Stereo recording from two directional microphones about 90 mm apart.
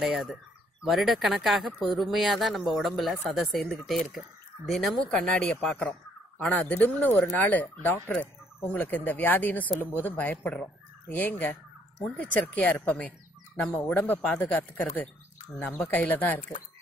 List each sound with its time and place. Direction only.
0.0 s speech: centre (ahead or behind); by 7.2 s 20° left (ahead or behind)
7.3 s fowl: 20° left (ahead or behind)
12.0 s speech: 15° left (ahead or behind)
13.6 s fowl: 20° left (ahead or behind)
15.9 s speech: 20° left (ahead or behind)